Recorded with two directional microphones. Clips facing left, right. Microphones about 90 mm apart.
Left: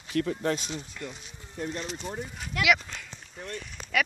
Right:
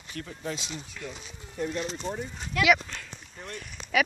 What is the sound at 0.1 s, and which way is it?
Speech, 70° left (ahead or behind).